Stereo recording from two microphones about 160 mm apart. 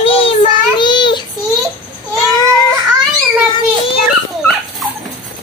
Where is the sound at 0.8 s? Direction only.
30° left (ahead or behind).